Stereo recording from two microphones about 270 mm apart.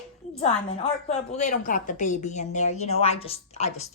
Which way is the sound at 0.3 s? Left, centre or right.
Left.